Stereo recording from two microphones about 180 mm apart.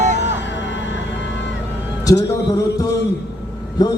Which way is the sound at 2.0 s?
20° left (ahead or behind).